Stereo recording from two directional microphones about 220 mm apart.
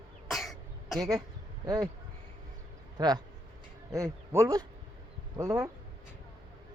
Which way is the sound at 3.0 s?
20° right (ahead or behind).